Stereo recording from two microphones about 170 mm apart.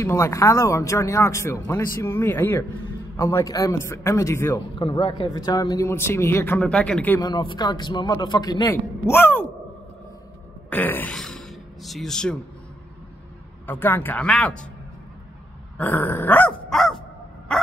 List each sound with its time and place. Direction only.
0.0 s speech: 15° left (ahead or behind)
4.7 s speech: 30° left (ahead or behind); by 7.2 s 10° left (ahead or behind)
7.2 s a man's voice: 25° left (ahead or behind)
10.7 s speech: 10° left (ahead or behind)
13.7 s speech: 10° left (ahead or behind)
15.8 s dog: 10° left (ahead or behind)